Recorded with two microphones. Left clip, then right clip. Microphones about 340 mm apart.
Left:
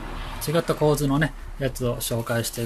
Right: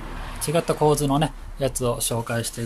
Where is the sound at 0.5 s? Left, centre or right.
Centre.